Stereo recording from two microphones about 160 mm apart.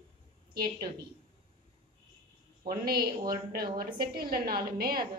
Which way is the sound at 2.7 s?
70° right (ahead or behind).